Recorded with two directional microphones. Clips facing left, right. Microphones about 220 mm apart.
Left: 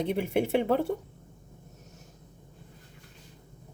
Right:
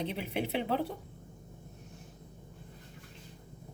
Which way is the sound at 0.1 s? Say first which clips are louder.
Left 8 dB; 50° left (ahead or behind).